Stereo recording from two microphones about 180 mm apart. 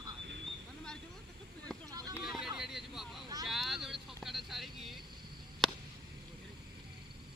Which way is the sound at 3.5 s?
Centre (ahead or behind).